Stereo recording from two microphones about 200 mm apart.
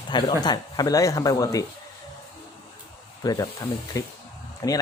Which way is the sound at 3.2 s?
20° left (ahead or behind).